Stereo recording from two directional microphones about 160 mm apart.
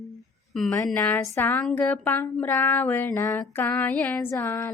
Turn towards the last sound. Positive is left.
turn(degrees=15)  # may be behind; listen again after turning